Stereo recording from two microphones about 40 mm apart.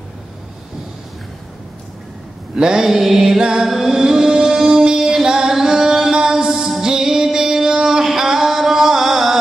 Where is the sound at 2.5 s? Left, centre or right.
Centre.